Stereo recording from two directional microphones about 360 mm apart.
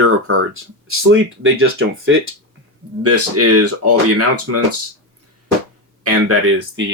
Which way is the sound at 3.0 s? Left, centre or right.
Right.